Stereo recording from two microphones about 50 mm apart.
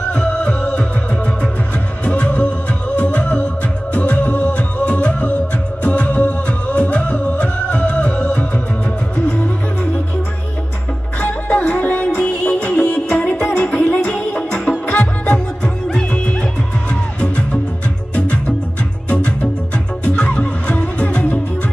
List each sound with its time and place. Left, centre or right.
0.1 s music: centre
11.1 s music: left
13.7 s music: left
14.0 s music: centre
15.3 s music: centre
19.0 s music: left